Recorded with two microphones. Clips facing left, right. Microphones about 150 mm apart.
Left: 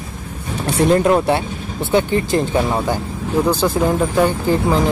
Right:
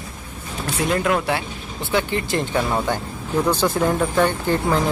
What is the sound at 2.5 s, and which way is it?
Speech, 10° left (ahead or behind).